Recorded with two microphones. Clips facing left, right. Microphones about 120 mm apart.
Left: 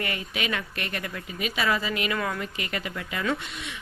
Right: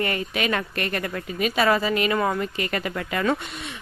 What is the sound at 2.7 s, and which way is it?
Speech, 45° right (ahead or behind).